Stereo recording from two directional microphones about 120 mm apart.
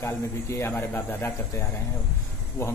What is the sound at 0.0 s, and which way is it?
Speech, 20° left (ahead or behind).